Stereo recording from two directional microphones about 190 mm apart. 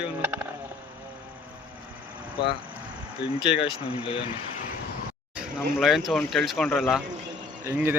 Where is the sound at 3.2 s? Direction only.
65° left (ahead or behind).